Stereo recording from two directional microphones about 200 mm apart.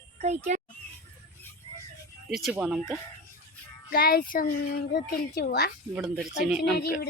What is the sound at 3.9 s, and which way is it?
A child's voice, 45° left (ahead or behind).